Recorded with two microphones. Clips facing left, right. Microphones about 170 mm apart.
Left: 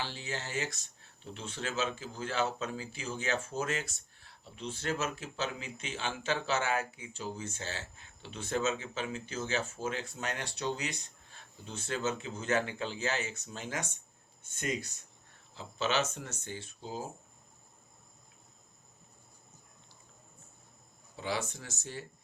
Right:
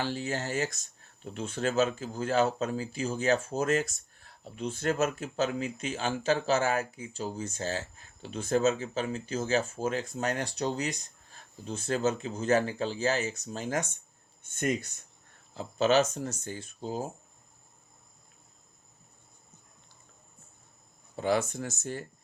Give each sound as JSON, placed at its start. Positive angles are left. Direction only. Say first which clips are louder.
{"t": 0.0, "sound": "speech", "louder": "right 7 dB", "side_deg": -45}
{"t": 21.2, "sound": "speech", "louder": "right 8 dB", "side_deg": -50}